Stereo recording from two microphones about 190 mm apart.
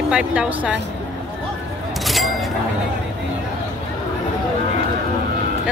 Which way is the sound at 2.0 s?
Centre (ahead or behind).